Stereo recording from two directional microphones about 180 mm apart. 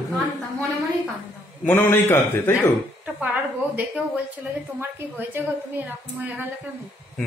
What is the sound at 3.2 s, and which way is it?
Speech, 10° right (ahead or behind).